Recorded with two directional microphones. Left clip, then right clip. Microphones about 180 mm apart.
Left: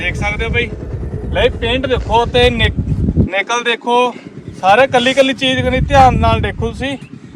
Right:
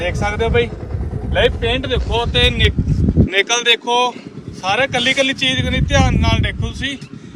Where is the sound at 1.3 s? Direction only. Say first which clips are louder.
Left 1 dB; 5° left (ahead or behind).